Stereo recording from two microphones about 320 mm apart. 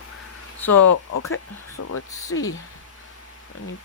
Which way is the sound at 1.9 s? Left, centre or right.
Left.